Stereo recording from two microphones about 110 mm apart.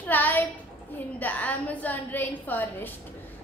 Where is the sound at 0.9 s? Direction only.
15° left (ahead or behind).